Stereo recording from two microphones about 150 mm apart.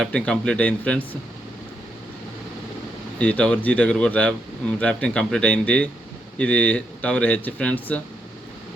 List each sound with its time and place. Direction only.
0.0 s speech: 5° left (ahead or behind)
3.2 s speech: 10° left (ahead or behind)